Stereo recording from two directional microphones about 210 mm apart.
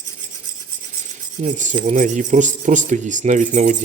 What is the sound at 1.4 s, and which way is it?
Speech, 35° right (ahead or behind).